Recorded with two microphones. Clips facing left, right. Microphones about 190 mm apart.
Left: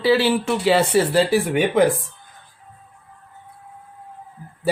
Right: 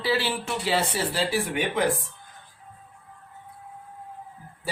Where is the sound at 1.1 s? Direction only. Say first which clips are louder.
Left 9 dB; 50° left (ahead or behind).